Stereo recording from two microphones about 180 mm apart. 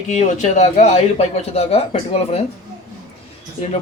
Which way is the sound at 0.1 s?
40° left (ahead or behind).